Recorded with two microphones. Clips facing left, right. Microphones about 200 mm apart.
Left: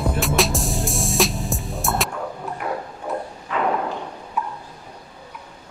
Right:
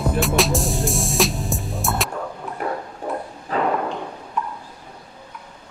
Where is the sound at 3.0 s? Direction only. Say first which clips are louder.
Even; 35° right (ahead or behind).